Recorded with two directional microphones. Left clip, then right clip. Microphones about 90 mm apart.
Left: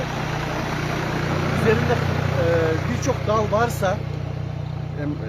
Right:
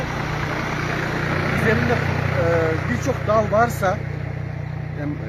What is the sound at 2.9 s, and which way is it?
Speech, 10° right (ahead or behind).